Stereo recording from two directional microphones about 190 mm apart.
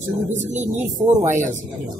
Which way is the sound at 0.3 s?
40° right (ahead or behind).